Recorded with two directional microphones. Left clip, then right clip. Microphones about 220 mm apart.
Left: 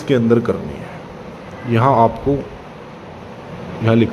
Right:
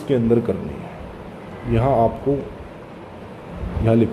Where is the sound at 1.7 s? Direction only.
10° left (ahead or behind).